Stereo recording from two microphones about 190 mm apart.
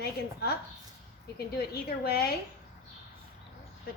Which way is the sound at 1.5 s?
55° left (ahead or behind).